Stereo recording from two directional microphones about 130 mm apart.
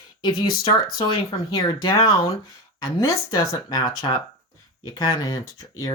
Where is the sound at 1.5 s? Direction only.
30° left (ahead or behind).